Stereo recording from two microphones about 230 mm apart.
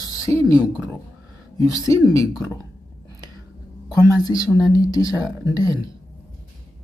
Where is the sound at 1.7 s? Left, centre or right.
Centre.